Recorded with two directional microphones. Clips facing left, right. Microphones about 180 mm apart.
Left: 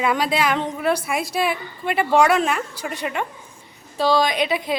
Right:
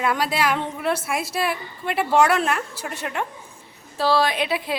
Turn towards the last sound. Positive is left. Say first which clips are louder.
# left 2 dB
turn(degrees=-5)  # may be behind; listen again after turning